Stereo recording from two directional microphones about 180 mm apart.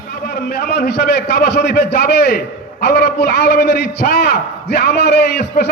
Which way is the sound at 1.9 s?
65° left (ahead or behind).